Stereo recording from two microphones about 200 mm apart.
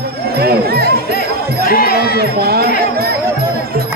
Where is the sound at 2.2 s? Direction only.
50° right (ahead or behind).